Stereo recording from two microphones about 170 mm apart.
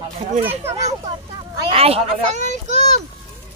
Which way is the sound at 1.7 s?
35° right (ahead or behind).